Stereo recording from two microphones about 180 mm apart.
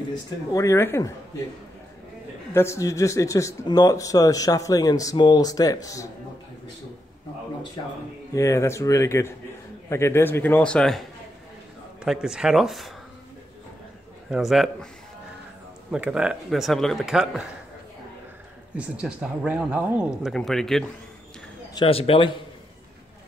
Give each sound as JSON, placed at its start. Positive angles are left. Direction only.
{"t": 0.1, "sound": "a man's voice", "side_deg": 20}
{"t": 2.5, "sound": "a man's voice", "side_deg": 15}
{"t": 8.4, "sound": "a man's voice", "side_deg": 15}
{"t": 14.3, "sound": "speech", "side_deg": 0}
{"t": 15.9, "sound": "speech", "side_deg": -5}
{"t": 18.8, "sound": "speech", "side_deg": -5}
{"t": 21.7, "sound": "speech", "side_deg": 30}